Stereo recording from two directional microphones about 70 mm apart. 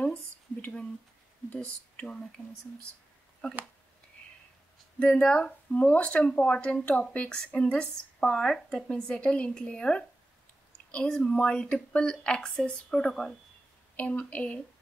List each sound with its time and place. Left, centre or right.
1.5 s speech: centre
3.4 s speech: centre
4.9 s speech: centre
11.1 s speech: centre
13.9 s a woman's voice: left